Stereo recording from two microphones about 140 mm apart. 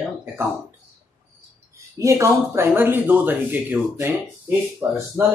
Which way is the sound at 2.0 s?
20° right (ahead or behind).